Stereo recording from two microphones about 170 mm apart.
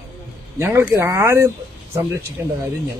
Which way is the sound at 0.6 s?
15° right (ahead or behind).